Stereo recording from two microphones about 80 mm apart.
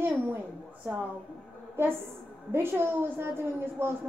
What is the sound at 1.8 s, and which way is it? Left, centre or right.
A woman's voice, right.